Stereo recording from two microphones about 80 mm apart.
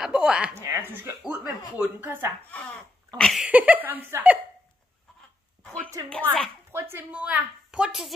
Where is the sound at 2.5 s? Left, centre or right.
Centre.